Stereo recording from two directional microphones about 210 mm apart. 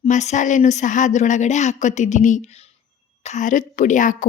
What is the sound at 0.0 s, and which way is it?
A woman's voice, 35° left (ahead or behind).